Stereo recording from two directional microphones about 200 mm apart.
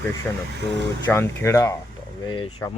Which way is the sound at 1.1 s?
15° left (ahead or behind).